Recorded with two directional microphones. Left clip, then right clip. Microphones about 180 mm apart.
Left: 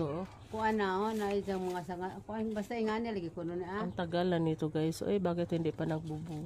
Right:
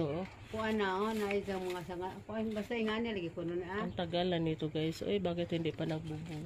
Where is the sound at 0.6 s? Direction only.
55° left (ahead or behind).